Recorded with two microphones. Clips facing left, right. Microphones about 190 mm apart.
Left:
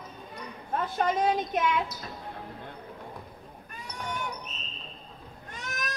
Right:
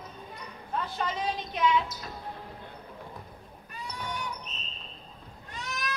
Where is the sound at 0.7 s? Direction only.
50° left (ahead or behind).